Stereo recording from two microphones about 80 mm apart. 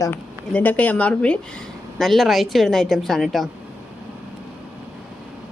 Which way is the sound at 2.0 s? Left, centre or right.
Centre.